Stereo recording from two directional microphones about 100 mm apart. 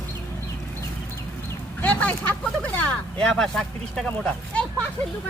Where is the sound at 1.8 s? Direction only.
15° left (ahead or behind).